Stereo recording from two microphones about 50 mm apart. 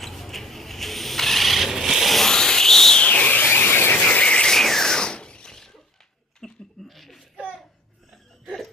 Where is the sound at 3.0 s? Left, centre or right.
Left.